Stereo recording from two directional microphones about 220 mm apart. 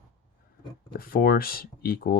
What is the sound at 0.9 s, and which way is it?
Speech, 40° left (ahead or behind).